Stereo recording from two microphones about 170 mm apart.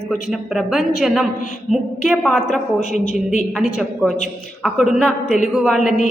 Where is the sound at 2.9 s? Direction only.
45° left (ahead or behind).